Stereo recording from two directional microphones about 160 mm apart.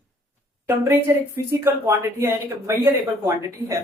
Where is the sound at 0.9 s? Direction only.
15° right (ahead or behind).